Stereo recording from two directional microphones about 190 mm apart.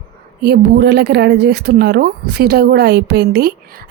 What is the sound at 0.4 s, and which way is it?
Speech, 60° right (ahead or behind).